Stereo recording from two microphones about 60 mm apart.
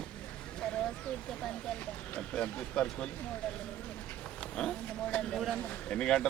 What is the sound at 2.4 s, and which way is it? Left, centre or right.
Speech, centre.